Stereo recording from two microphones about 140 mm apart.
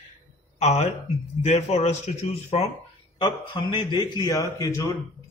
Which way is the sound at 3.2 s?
30° left (ahead or behind).